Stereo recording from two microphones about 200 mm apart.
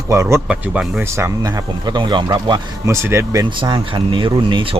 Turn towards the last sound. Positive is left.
turn(degrees=-25)  # may be behind; listen again after turning